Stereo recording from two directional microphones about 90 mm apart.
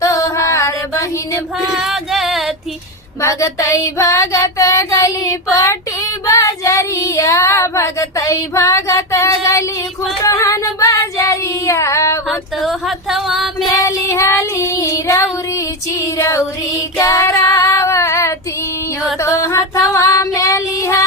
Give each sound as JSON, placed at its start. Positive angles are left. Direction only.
{"t": 0.0, "sound": "music", "side_deg": 40}
{"t": 1.8, "sound": "music", "side_deg": -5}
{"t": 3.2, "sound": "child singing", "side_deg": 35}
{"t": 10.2, "sound": "female singing", "side_deg": 35}
{"t": 12.3, "sound": "a sound", "side_deg": 0}
{"t": 13.8, "sound": "female singing", "side_deg": 30}
{"t": 16.1, "sound": "child singing", "side_deg": 35}